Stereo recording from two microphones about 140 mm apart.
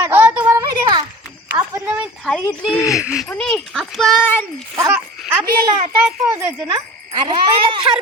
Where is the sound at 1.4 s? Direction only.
20° right (ahead or behind).